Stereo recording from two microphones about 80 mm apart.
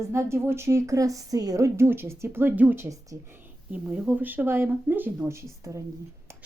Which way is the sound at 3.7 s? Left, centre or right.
Centre.